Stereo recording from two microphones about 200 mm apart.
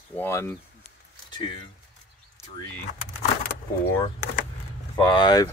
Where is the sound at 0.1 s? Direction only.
10° left (ahead or behind).